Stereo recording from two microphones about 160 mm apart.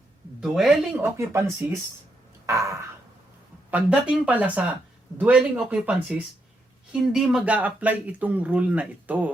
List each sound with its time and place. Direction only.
0.3 s speech: centre (ahead or behind)
1.1 s speech: 15° right (ahead or behind)
2.5 s a sound: 20° right (ahead or behind)
3.7 s speech: 10° right (ahead or behind)